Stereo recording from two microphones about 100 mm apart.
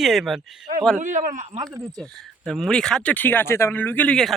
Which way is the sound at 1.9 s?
5° left (ahead or behind).